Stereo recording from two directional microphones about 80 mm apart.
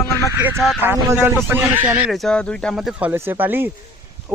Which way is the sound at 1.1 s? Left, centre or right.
Right.